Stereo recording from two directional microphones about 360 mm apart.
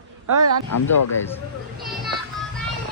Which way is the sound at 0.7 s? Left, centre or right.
Left.